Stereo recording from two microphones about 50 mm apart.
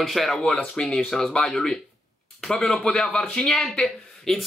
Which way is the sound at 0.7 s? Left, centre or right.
Centre.